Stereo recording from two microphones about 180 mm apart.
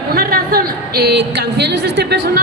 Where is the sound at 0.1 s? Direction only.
55° right (ahead or behind).